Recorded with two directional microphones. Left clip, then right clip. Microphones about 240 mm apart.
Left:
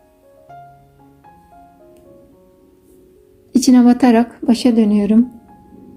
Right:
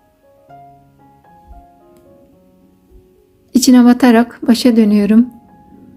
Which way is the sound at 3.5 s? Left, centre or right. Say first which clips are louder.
Right 2 dB; centre.